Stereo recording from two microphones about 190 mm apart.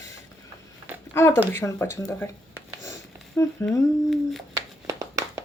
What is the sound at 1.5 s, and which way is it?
Speech, 10° left (ahead or behind).